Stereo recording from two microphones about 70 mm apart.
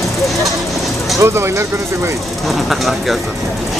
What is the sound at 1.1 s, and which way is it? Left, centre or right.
Speech, right.